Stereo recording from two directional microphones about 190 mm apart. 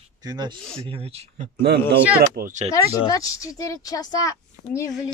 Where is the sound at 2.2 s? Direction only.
40° right (ahead or behind).